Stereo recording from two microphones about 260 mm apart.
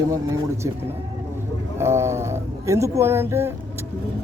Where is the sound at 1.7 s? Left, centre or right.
Centre.